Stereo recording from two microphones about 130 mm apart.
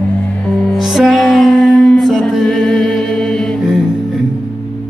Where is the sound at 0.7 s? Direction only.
Centre (ahead or behind).